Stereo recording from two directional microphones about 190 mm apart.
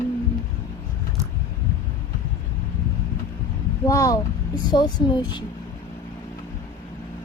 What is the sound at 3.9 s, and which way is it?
Speech, 15° left (ahead or behind).